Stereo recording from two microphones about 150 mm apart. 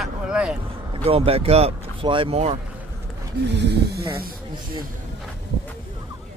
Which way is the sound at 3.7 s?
90° right.